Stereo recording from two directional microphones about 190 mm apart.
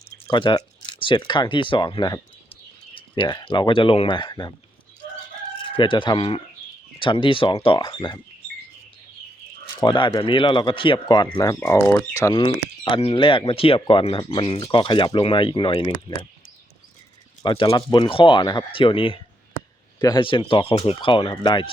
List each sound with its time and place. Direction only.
0.3 s speech: 25° left (ahead or behind)
5.7 s speech: 25° left (ahead or behind)
9.8 s speech: 25° left (ahead or behind)
12.4 s speech: 30° left (ahead or behind)
17.4 s speech: 25° left (ahead or behind)